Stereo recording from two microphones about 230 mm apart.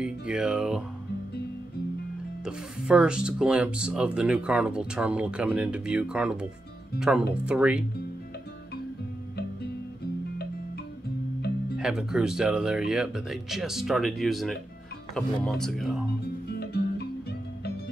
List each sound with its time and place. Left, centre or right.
0.0 s speech: centre
2.4 s speech: centre
11.8 s speech: centre
16.5 s music: left